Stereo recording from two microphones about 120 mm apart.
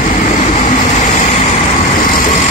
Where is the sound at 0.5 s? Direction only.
90° left.